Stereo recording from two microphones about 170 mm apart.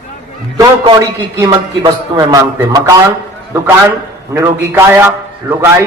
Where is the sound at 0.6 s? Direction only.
20° right (ahead or behind).